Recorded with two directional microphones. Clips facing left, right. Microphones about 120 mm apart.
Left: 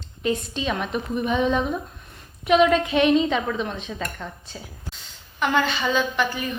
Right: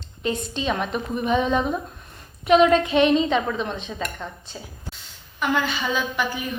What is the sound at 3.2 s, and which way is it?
A woman's voice, centre (ahead or behind).